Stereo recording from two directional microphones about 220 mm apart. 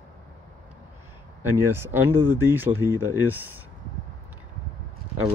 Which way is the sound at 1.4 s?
10° right (ahead or behind).